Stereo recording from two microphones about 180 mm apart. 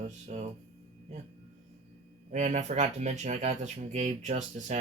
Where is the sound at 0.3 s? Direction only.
40° right (ahead or behind).